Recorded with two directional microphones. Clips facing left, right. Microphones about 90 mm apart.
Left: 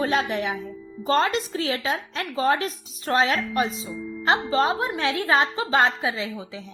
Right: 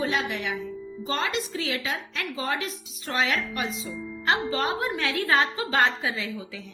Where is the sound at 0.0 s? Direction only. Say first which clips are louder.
Left 4 dB; 40° left (ahead or behind).